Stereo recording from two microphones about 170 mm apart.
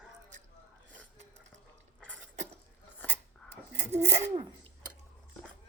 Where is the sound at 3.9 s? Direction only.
40° right (ahead or behind).